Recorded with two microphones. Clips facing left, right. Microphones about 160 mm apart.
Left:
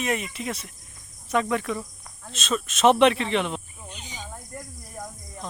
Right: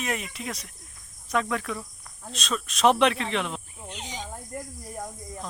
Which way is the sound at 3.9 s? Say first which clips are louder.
Right 4 dB; 90° right.